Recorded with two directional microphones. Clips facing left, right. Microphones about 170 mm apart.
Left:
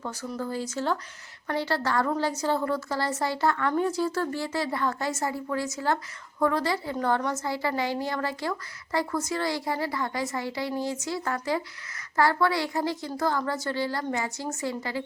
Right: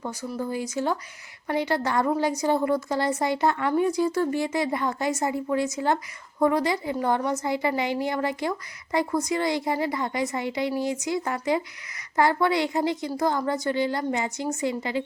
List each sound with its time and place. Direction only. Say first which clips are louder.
0.0 s a woman's voice: right 2 dB; 15° right (ahead or behind)